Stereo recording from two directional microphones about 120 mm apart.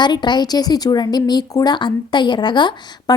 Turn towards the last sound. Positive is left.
turn(degrees=40)  # may be behind; listen again after turning